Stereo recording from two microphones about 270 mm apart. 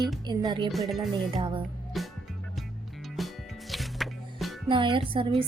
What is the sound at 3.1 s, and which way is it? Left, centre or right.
Music, centre.